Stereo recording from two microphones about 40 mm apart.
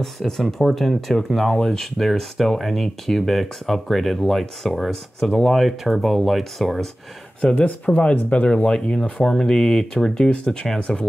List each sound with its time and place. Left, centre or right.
0.2 s speech: centre
7.5 s speech: left
8.6 s speech: centre
10.4 s speech: left